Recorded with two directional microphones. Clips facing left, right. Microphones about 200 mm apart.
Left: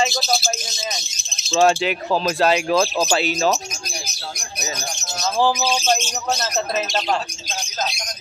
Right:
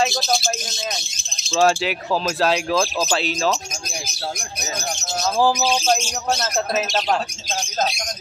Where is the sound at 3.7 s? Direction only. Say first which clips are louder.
Right 1 dB; 50° right (ahead or behind).